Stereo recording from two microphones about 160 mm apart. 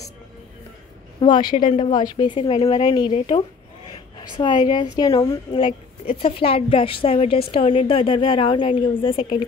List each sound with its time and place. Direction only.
1.2 s speech: 30° left (ahead or behind)
1.5 s speech: 55° left (ahead or behind)
1.9 s a woman's voice: 30° left (ahead or behind)